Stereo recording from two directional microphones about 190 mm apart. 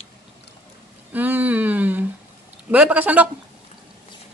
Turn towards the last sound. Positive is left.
turn(degrees=-5)  # may be behind; listen again after turning